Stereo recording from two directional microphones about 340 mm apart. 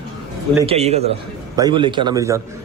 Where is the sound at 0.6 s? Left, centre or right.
Centre.